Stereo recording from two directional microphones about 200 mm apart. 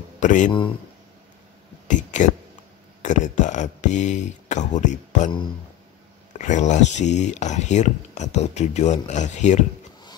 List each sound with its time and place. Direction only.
0.2 s speech: 40° left (ahead or behind)
1.9 s speech: 40° left (ahead or behind)
6.3 s speech: 35° left (ahead or behind)